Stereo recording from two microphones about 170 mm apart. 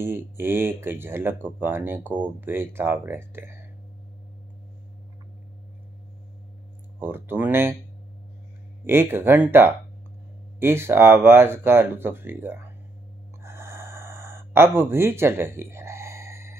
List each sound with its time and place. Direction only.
0.0 s speech: 15° right (ahead or behind)
7.0 s speech: 10° right (ahead or behind)
8.8 s speech: 15° right (ahead or behind)
13.4 s gasp: 15° right (ahead or behind)